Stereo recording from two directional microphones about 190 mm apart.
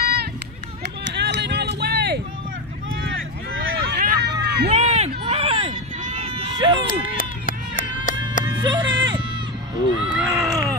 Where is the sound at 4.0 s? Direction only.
55° right (ahead or behind).